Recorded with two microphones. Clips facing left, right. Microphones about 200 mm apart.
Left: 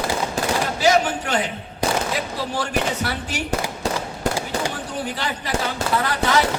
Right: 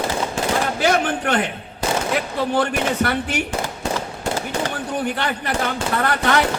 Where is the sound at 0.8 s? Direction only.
60° right (ahead or behind).